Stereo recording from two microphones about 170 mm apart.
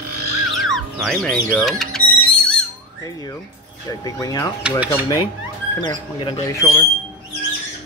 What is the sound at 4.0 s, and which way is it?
Speech, 20° left (ahead or behind).